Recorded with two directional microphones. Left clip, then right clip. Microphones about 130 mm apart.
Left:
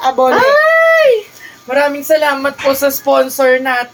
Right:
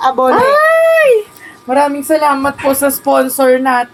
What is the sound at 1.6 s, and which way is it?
Speech, 10° right (ahead or behind).